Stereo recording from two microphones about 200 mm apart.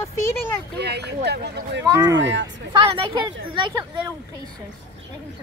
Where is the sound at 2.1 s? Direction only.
65° right (ahead or behind).